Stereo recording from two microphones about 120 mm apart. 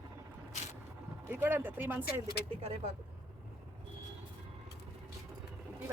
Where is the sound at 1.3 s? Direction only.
15° right (ahead or behind).